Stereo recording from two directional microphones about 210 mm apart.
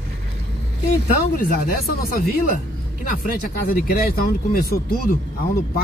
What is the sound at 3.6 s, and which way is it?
Speech, 45° left (ahead or behind).